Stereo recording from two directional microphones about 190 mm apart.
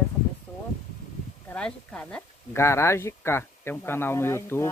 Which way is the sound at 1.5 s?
5° left (ahead or behind).